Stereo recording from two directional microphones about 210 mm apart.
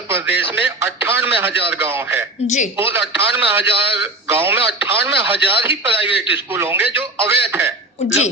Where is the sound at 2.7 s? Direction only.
10° right (ahead or behind).